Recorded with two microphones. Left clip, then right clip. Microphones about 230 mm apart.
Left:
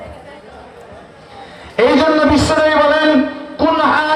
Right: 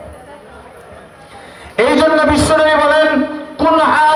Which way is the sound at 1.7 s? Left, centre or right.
Right.